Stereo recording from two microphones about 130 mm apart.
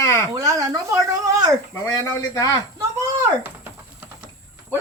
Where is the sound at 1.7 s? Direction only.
20° left (ahead or behind).